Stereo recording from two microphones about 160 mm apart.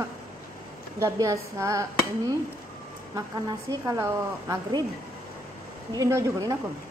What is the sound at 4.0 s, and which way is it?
Speech, 20° right (ahead or behind).